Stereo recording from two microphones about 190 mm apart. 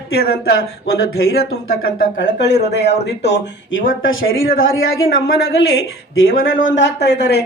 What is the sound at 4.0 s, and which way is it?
Speech, 90° left.